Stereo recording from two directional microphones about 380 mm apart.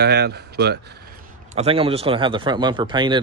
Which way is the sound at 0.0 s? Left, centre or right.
Right.